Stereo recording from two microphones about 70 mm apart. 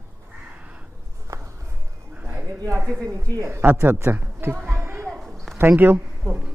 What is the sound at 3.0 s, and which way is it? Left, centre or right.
Speech, right.